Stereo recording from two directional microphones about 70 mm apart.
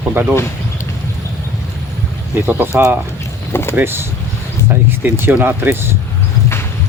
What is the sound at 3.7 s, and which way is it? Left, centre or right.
Speech, right.